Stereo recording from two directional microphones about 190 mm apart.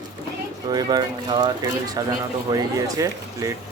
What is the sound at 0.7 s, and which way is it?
Speech, 20° right (ahead or behind).